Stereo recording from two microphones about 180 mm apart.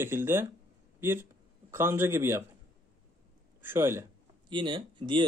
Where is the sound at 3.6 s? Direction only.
15° right (ahead or behind).